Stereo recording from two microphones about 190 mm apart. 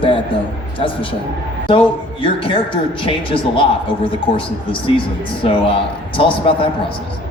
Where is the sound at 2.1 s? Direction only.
30° left (ahead or behind).